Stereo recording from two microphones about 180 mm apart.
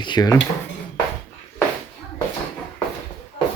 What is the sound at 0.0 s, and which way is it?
Speech, 25° left (ahead or behind).